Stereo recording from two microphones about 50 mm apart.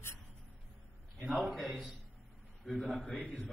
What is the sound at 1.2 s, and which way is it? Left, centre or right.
Speech, right.